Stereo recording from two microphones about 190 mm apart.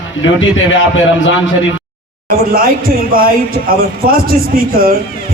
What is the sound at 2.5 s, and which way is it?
Speech, 50° right (ahead or behind).